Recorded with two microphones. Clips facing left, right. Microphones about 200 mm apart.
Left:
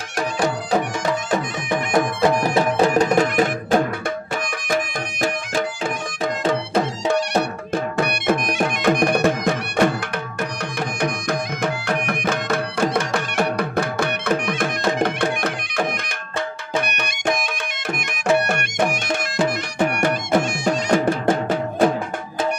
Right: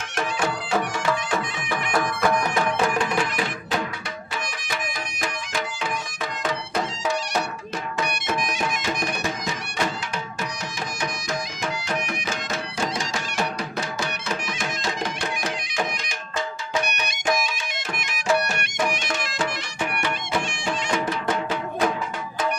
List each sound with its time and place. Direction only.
1.7 s music: 25° left (ahead or behind); by 5.7 s 45° left (ahead or behind)
6.8 s music: 60° left (ahead or behind)
11.0 s music: 60° left (ahead or behind)